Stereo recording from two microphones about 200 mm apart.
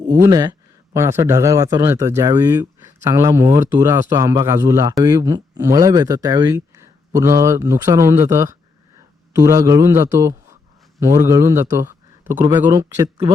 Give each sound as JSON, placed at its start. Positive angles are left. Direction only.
{"t": 0.2, "sound": "a man's voice", "side_deg": -15}